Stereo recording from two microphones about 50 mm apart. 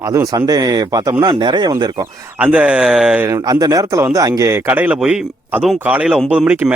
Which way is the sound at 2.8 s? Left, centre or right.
Centre.